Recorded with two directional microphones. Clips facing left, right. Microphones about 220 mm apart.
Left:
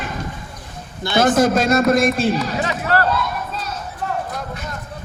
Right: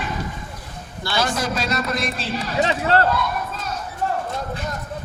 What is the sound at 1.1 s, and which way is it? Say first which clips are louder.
A man's voice: left 9 dB; 50° left (ahead or behind).